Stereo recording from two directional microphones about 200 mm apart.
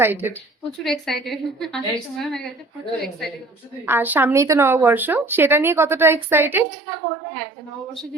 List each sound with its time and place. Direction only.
0.0 s speech: 10° right (ahead or behind)
0.9 s a woman's voice: centre (ahead or behind)
3.8 s speech: 10° right (ahead or behind)